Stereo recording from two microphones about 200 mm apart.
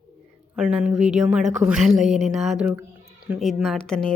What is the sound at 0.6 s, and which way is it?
Speech, 5° right (ahead or behind).